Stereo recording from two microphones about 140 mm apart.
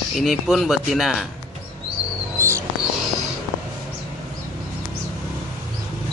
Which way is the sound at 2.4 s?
20° right (ahead or behind).